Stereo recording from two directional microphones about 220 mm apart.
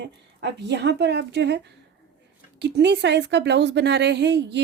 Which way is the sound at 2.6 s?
50° right (ahead or behind).